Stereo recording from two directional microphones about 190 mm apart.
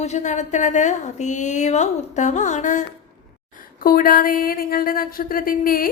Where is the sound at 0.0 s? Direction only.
40° left (ahead or behind).